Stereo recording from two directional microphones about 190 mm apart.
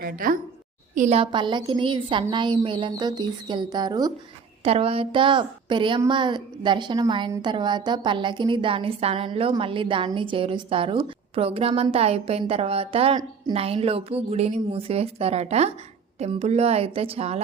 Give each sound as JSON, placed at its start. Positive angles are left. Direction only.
{"t": 0.0, "sound": "a woman's voice", "side_deg": -45}
{"t": 0.9, "sound": "a woman's voice", "side_deg": -35}